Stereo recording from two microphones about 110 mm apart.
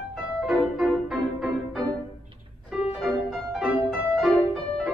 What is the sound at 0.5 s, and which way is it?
Music, centre (ahead or behind).